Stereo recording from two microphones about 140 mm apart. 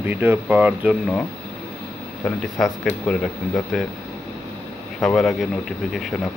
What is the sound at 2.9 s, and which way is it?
Speech, 5° left (ahead or behind).